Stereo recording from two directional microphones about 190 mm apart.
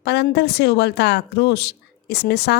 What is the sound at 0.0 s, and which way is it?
Speech, 60° left (ahead or behind).